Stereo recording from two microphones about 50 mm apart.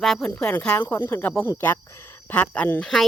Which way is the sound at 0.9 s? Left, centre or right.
Left.